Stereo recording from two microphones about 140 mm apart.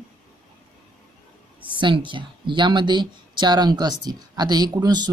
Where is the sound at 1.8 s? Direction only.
35° right (ahead or behind).